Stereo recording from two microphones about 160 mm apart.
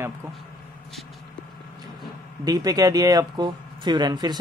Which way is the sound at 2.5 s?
25° right (ahead or behind).